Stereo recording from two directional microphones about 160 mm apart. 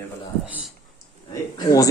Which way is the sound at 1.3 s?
20° left (ahead or behind).